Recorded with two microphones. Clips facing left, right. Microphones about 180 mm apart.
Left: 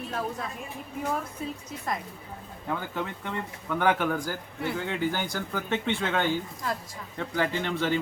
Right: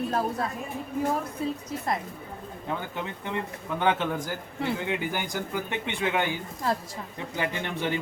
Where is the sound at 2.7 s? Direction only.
20° right (ahead or behind).